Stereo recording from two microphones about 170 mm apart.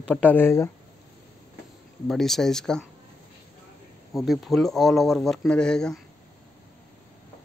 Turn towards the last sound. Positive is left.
turn(degrees=5)  # may be behind; listen again after turning